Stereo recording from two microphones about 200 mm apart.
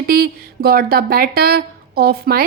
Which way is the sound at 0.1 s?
50° right (ahead or behind).